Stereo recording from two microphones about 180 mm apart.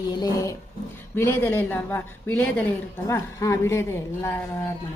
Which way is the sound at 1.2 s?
10° left (ahead or behind).